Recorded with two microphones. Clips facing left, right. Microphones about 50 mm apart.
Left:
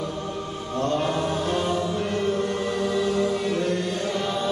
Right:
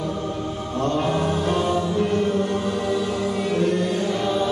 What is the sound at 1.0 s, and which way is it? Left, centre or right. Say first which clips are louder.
Music: right 3 dB; right.